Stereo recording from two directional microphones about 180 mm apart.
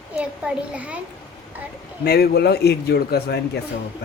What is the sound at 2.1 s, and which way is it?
Speech, 60° left (ahead or behind).